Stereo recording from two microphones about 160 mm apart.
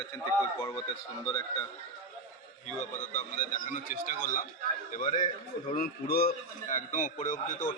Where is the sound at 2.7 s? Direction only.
50° left (ahead or behind).